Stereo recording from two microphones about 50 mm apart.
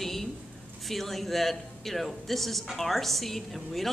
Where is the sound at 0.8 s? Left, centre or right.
Centre.